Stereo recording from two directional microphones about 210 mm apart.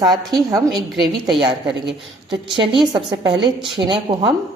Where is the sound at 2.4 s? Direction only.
25° right (ahead or behind).